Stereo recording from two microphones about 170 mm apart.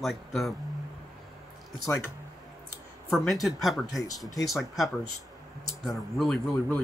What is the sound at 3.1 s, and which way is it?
Speech, centre (ahead or behind).